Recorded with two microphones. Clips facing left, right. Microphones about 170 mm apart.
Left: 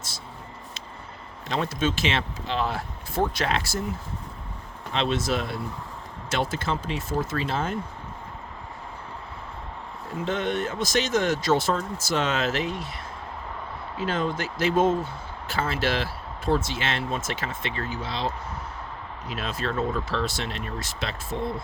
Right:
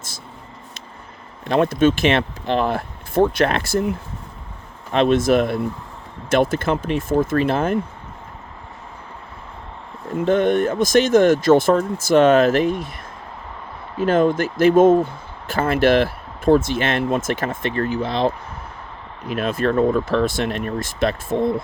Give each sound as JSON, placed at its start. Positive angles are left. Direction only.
{"t": 1.5, "sound": "speech", "side_deg": -55}
{"t": 10.2, "sound": "speech", "side_deg": -50}
{"t": 14.0, "sound": "speech", "side_deg": -50}
{"t": 19.3, "sound": "speech", "side_deg": -55}